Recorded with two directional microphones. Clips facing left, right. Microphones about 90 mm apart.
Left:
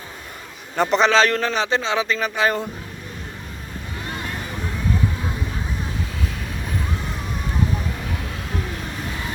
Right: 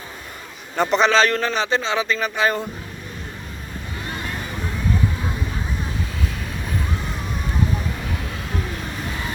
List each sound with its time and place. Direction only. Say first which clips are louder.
0.8 s a man's voice: even; 75° left (ahead or behind); by 2.6 s 90° left